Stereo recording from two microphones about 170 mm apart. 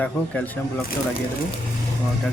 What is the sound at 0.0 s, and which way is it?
Speech, 10° left (ahead or behind).